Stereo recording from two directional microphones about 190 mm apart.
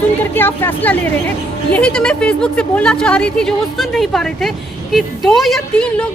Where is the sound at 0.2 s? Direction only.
10° left (ahead or behind).